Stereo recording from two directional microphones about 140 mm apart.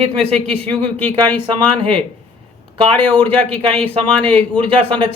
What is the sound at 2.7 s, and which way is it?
A man's voice, 40° right (ahead or behind).